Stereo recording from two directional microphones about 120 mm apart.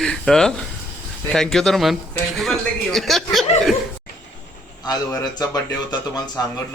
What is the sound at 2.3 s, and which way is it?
Chuckle, centre (ahead or behind).